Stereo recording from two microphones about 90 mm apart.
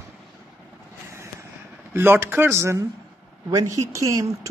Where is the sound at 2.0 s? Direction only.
25° right (ahead or behind).